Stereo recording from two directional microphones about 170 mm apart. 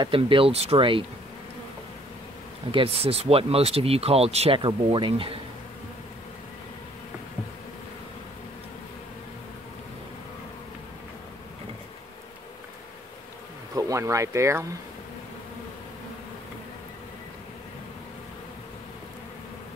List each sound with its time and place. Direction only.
0.0 s speech: 30° right (ahead or behind)
2.7 s speech: 35° right (ahead or behind)
13.7 s speech: 20° right (ahead or behind)